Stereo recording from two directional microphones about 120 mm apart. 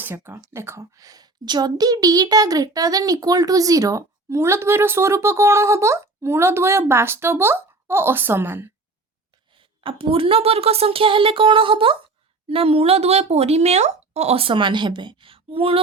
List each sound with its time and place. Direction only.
0.0 s a woman's voice: 20° right (ahead or behind)
9.5 s speech: 45° right (ahead or behind)